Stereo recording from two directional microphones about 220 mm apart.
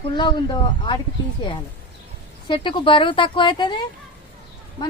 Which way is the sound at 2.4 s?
20° left (ahead or behind).